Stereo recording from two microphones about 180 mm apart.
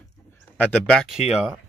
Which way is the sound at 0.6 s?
5° left (ahead or behind).